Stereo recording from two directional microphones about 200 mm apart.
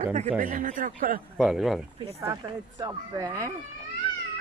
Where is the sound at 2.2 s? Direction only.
20° right (ahead or behind).